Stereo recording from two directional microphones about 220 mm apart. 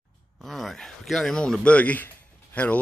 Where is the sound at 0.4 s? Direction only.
Centre (ahead or behind).